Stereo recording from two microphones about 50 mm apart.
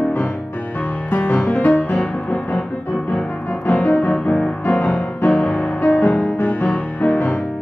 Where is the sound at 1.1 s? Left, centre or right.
Left.